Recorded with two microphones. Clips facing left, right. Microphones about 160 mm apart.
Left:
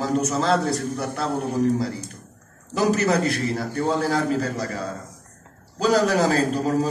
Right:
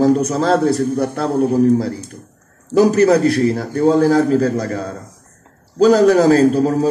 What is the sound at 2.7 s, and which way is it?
A man's voice, 45° right (ahead or behind).